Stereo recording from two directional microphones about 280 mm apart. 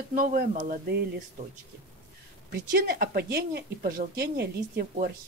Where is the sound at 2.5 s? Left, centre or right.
Right.